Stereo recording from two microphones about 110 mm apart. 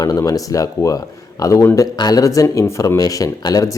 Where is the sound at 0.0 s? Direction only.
30° left (ahead or behind).